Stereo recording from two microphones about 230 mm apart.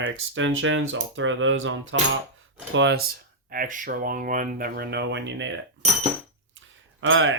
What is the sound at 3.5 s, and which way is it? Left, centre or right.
Speech, right.